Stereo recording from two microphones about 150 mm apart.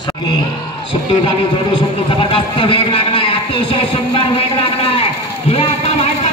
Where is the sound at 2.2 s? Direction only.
35° left (ahead or behind).